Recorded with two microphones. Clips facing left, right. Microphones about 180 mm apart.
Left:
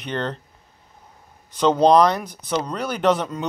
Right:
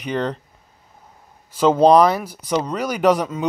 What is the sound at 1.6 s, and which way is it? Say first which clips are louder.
Speech: right 2 dB; 5° right (ahead or behind).